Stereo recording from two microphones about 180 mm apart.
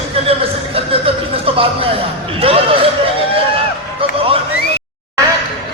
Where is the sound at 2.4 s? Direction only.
30° right (ahead or behind).